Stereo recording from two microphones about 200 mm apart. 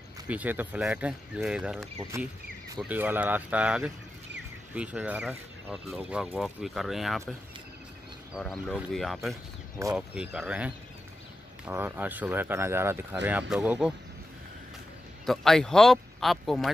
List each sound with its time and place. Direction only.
0.3 s speech: 10° right (ahead or behind)
9.3 s speech: 15° right (ahead or behind)
15.2 s speech: centre (ahead or behind)